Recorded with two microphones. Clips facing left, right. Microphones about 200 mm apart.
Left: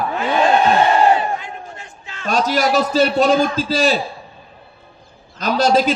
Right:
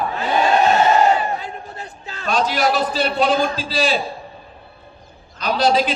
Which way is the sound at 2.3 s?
45° left (ahead or behind).